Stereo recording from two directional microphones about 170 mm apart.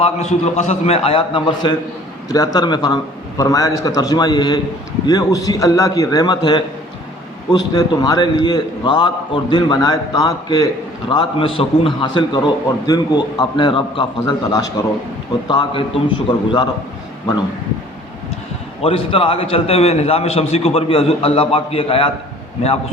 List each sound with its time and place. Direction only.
0.0 s a man's voice: 40° left (ahead or behind)
18.8 s a man's voice: 35° left (ahead or behind)